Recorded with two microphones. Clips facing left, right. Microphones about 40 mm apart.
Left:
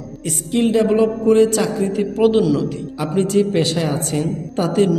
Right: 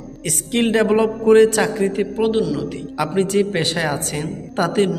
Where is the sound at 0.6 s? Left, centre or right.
Right.